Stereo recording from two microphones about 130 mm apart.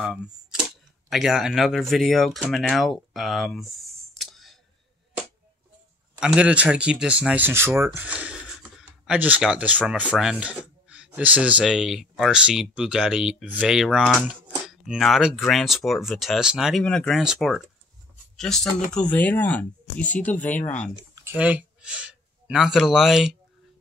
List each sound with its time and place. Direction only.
0.0 s speech: 5° right (ahead or behind)
6.1 s speech: 5° right (ahead or behind); by 20.7 s 15° left (ahead or behind)
20.9 s a sound: 25° right (ahead or behind)
21.4 s speech: 10° right (ahead or behind)